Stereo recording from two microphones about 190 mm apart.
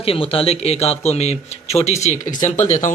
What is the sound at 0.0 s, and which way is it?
Speech, 30° left (ahead or behind).